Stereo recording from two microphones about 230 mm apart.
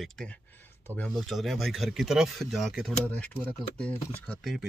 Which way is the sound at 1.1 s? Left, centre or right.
Centre.